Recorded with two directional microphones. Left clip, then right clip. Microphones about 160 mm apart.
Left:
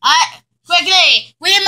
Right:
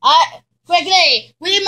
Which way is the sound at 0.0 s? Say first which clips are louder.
Right 1 dB; 40° left (ahead or behind).